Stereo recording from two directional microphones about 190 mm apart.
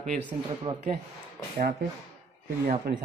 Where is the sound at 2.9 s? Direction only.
55° right (ahead or behind).